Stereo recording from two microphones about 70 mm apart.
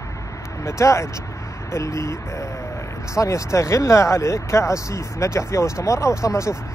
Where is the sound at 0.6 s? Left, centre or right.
Left.